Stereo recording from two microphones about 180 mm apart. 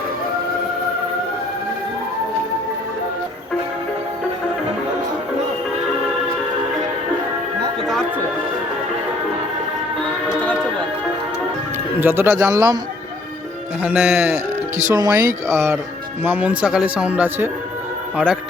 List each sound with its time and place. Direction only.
11.9 s speech: 10° right (ahead or behind)
13.8 s speech: centre (ahead or behind)
14.8 s speech: 20° right (ahead or behind)